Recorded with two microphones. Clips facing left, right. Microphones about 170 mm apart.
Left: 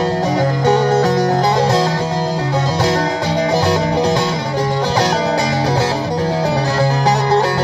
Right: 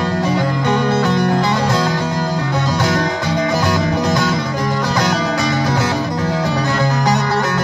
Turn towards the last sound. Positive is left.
turn(degrees=30)  # may be behind; listen again after turning